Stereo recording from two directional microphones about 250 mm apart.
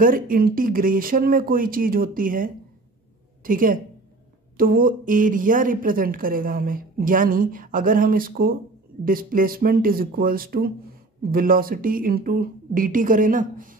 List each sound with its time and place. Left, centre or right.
0.0 s a woman's voice: right